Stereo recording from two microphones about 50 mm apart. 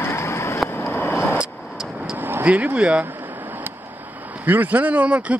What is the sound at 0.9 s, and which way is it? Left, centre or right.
Vehicle, left.